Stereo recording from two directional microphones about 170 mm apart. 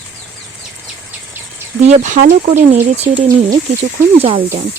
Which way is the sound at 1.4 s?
10° right (ahead or behind).